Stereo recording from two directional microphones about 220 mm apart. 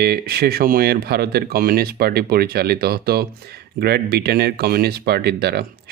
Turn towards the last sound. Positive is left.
turn(degrees=-50)  # may be behind; listen again after turning